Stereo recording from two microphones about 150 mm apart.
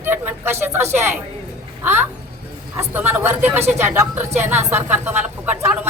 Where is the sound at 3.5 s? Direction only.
45° right (ahead or behind).